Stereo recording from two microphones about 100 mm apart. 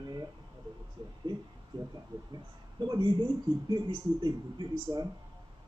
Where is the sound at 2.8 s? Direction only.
45° right (ahead or behind).